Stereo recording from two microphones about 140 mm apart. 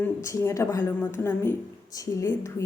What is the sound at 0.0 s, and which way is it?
A woman's voice, 20° left (ahead or behind).